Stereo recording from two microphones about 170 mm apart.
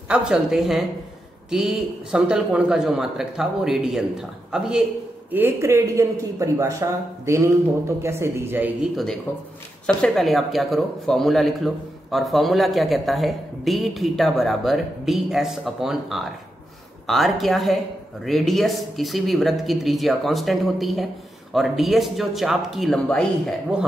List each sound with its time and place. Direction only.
0.1 s speech: 5° right (ahead or behind)
8.9 s speech: centre (ahead or behind)